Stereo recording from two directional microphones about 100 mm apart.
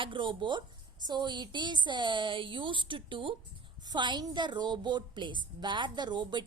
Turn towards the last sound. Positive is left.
turn(degrees=-50)  # may be behind; listen again after turning